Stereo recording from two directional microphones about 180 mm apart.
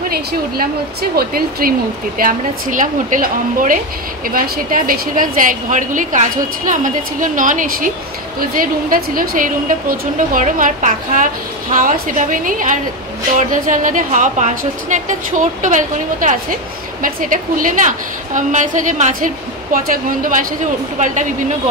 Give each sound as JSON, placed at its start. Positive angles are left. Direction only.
{"t": 1.1, "sound": "a woman's voice", "side_deg": -55}